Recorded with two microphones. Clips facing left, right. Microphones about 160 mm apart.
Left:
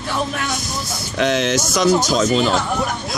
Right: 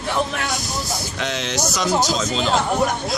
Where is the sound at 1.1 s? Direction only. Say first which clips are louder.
Left 9 dB; 55° left (ahead or behind).